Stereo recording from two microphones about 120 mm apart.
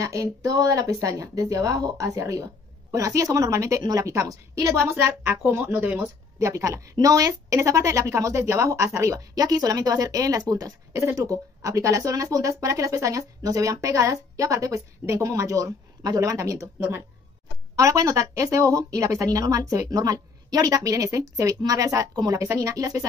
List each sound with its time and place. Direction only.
0.0 s a woman's voice: 25° right (ahead or behind)
6.4 s a woman's voice: 25° right (ahead or behind)